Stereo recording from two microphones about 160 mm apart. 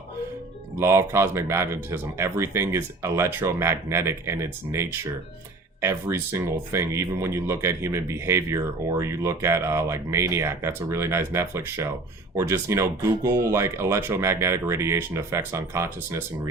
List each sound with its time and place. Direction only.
0.8 s speech: 15° right (ahead or behind)